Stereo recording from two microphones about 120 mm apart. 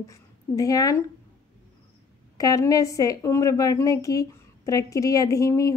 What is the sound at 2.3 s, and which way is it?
A woman's voice, 30° left (ahead or behind).